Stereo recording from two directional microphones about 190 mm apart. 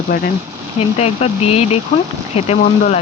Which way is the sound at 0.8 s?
35° left (ahead or behind).